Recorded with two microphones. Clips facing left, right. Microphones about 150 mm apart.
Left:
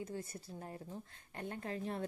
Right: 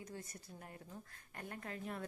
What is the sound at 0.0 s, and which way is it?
A woman's voice, 30° left (ahead or behind).